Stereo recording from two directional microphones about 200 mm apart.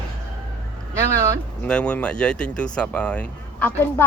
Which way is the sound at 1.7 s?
5° left (ahead or behind).